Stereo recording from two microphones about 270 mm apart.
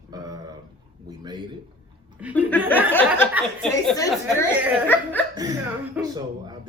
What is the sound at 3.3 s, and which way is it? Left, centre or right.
Speech, centre.